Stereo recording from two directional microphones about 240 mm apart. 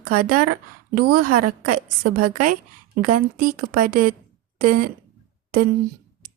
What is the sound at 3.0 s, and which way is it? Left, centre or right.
A woman's voice, right.